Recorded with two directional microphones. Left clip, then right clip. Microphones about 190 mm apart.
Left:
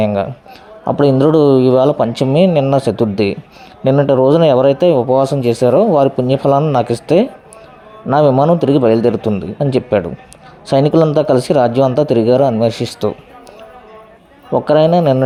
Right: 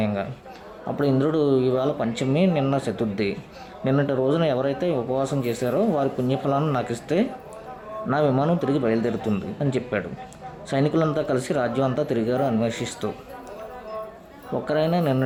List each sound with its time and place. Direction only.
0.0 s speech: 35° left (ahead or behind)
10.7 s speech: 30° left (ahead or behind)
14.5 s speech: 35° left (ahead or behind)